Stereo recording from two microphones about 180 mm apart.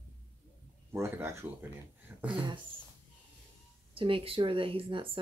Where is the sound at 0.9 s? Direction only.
15° right (ahead or behind).